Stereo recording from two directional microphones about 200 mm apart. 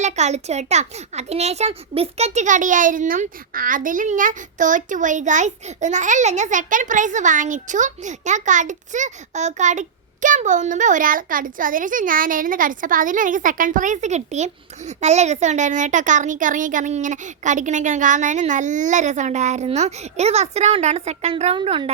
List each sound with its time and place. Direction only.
0.0 s a child's voice: 35° right (ahead or behind)